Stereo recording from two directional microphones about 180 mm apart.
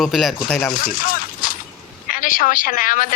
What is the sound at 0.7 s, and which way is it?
A man's voice, 50° left (ahead or behind).